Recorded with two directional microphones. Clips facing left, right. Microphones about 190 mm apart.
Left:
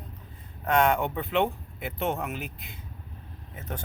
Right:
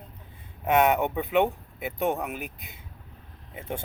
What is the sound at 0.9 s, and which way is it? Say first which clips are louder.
Speech: right 2 dB; 15° right (ahead or behind).